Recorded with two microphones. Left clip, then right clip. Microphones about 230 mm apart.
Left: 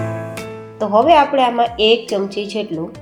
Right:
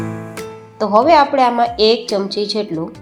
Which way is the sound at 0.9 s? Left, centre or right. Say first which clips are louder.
Right 1 dB; centre.